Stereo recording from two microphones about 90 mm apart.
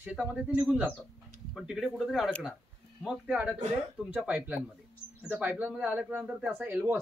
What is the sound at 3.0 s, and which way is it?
Speech, 15° right (ahead or behind).